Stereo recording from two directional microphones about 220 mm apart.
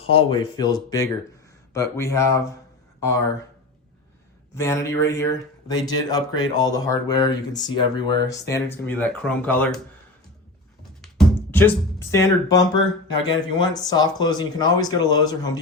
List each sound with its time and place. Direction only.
0.1 s speech: 25° left (ahead or behind)
4.5 s speech: 15° left (ahead or behind)
11.5 s speech: 10° left (ahead or behind)